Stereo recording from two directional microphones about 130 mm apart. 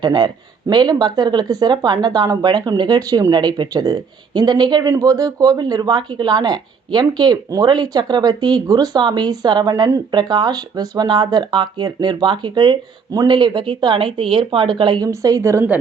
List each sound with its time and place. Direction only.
0.0 s speech: 35° right (ahead or behind)
15.0 s a woman's voice: 30° right (ahead or behind)